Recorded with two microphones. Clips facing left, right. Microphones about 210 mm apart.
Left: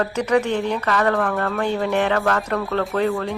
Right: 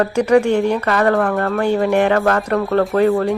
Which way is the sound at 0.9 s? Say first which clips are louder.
Right 2 dB; 40° right (ahead or behind).